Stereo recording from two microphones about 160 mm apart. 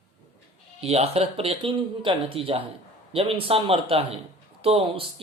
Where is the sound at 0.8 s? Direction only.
40° right (ahead or behind).